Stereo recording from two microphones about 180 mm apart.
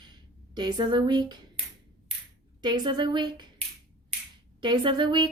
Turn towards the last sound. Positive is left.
turn(degrees=-25)  # may be behind; listen again after turning